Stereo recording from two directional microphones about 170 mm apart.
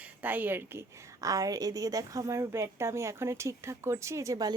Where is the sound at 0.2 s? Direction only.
10° right (ahead or behind).